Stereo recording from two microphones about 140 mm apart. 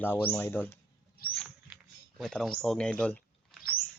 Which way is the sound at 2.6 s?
5° left (ahead or behind).